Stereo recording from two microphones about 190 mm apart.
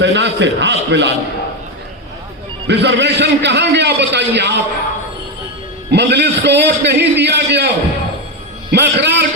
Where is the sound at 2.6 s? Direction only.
65° right (ahead or behind).